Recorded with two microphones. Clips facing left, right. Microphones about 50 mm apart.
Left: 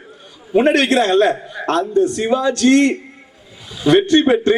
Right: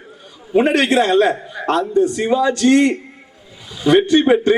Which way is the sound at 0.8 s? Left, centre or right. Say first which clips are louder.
Even; centre.